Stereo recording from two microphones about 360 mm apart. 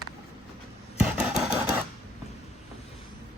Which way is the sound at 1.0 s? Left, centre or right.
Centre.